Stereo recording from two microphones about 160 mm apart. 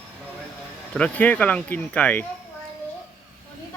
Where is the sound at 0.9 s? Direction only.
10° left (ahead or behind).